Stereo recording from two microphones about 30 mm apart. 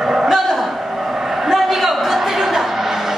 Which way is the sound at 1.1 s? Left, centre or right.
Centre.